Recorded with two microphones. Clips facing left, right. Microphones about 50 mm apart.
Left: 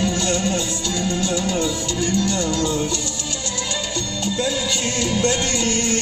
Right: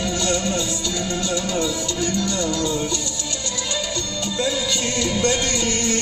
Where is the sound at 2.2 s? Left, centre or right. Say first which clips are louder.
Left 1 dB; left.